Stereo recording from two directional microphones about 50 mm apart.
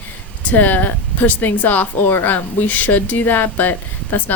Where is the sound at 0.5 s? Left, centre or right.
Left.